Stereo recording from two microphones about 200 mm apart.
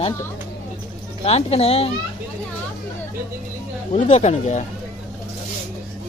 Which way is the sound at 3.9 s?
35° left (ahead or behind).